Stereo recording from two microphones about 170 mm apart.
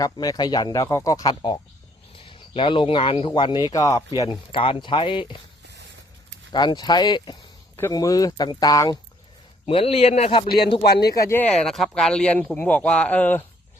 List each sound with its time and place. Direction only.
0.0 s speech: 20° left (ahead or behind)
4.2 s speech: 30° left (ahead or behind)
6.5 s speech: 25° left (ahead or behind)
9.6 s a man's voice: 35° left (ahead or behind)
10.8 s speech: 70° left (ahead or behind)
11.1 s speech: 15° left (ahead or behind)